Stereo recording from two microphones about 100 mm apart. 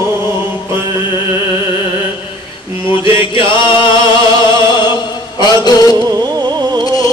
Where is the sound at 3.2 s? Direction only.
55° left (ahead or behind).